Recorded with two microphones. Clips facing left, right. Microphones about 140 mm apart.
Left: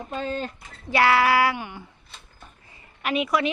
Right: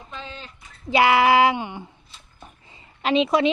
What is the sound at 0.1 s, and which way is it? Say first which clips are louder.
Speech: left 9 dB; 45° left (ahead or behind).